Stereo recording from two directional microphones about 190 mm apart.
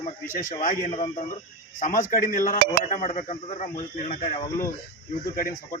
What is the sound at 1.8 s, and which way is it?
Speech, 45° left (ahead or behind).